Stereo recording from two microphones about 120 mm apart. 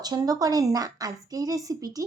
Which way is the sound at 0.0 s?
30° right (ahead or behind).